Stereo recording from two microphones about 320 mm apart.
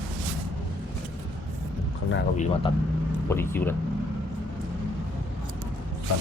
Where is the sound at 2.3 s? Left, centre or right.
Left.